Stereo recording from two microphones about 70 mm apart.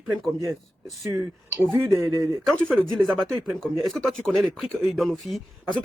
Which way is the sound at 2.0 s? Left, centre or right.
Right.